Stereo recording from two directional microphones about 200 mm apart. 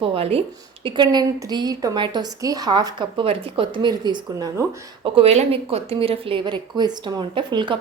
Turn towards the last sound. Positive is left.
turn(degrees=-25)  # may be behind; listen again after turning